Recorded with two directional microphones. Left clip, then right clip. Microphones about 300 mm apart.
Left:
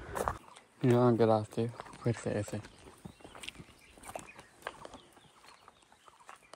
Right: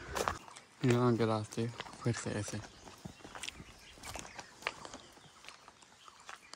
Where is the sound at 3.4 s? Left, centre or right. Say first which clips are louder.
Right 1 dB; centre.